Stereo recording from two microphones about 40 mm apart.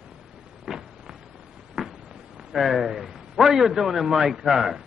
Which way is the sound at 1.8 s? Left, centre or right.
Right.